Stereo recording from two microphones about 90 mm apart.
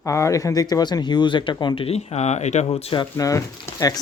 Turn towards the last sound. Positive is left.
turn(degrees=40)  # may be behind; listen again after turning